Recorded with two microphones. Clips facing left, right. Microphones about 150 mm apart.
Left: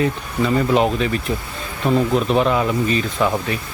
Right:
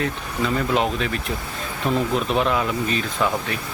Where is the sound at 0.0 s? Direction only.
5° left (ahead or behind).